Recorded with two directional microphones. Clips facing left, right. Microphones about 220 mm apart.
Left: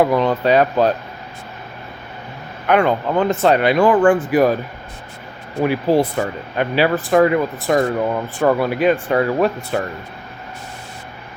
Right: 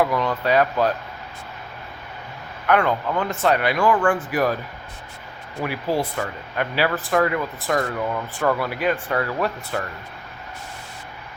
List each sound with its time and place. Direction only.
0.0 s speech: 25° left (ahead or behind)
2.6 s speech: 20° left (ahead or behind)
5.6 s speech: 25° left (ahead or behind)